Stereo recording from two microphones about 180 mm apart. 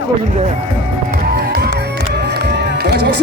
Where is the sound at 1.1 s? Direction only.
55° right (ahead or behind).